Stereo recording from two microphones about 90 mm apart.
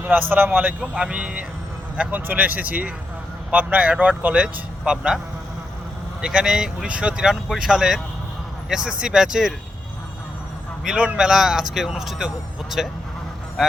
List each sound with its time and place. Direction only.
0.0 s a man's voice: 20° right (ahead or behind)
6.2 s speech: 10° right (ahead or behind)
10.8 s speech: 15° right (ahead or behind)